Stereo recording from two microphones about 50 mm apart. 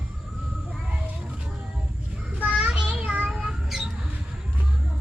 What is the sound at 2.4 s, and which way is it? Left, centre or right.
Child singing, right.